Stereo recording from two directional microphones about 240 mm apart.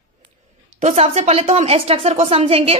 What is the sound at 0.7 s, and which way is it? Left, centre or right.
A woman's voice, right.